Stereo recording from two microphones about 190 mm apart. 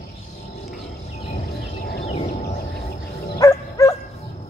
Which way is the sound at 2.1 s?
40° left (ahead or behind).